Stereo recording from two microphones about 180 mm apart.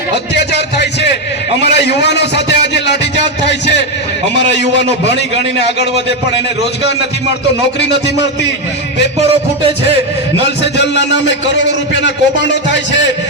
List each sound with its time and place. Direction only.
1.6 s a sound: 70° left (ahead or behind)
5.0 s a man's voice: 70° left (ahead or behind)
7.8 s a man's voice: 75° left (ahead or behind)
10.6 s a man's voice: 75° left (ahead or behind)